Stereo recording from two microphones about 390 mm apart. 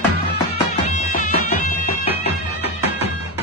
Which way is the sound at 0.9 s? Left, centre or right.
Centre.